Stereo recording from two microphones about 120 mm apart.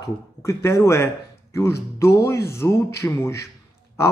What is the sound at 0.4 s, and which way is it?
Speech, 25° left (ahead or behind).